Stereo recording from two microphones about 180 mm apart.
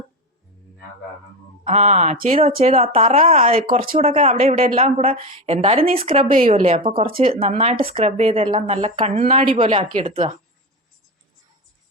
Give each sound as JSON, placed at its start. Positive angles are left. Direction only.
{"t": 1.6, "sound": "speech", "side_deg": -35}